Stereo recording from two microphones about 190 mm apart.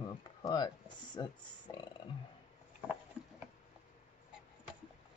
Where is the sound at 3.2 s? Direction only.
5° right (ahead or behind).